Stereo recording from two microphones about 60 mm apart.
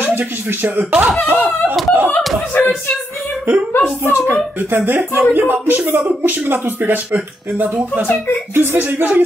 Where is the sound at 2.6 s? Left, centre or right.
Left.